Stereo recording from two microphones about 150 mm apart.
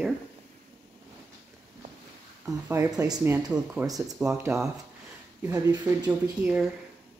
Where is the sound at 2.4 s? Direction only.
20° right (ahead or behind).